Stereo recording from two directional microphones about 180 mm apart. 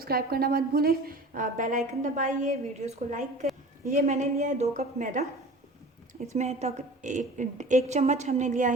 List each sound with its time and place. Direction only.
0.0 s a woman's voice: 60° right (ahead or behind)
6.2 s a woman's voice: 40° right (ahead or behind)